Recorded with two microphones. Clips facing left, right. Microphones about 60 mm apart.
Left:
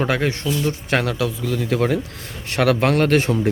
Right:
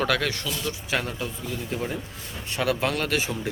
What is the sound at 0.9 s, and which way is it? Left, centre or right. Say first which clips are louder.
Speech: left 7 dB; left.